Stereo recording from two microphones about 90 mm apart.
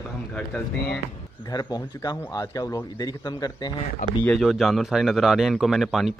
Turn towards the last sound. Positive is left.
turn(degrees=-5)  # may be behind; listen again after turning